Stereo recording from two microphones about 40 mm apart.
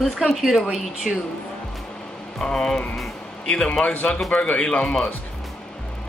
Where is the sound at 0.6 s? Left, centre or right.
Centre.